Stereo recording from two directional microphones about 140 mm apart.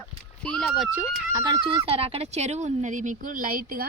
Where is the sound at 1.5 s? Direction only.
35° right (ahead or behind); by 3.8 s 90° right.